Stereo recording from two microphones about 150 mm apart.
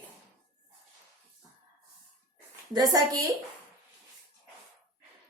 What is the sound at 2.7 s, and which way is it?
Speech, 25° right (ahead or behind).